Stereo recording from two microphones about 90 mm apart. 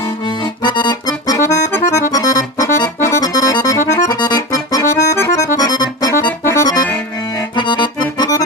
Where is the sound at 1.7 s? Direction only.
35° left (ahead or behind).